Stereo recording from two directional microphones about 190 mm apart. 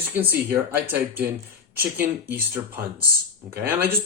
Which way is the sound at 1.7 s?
10° right (ahead or behind).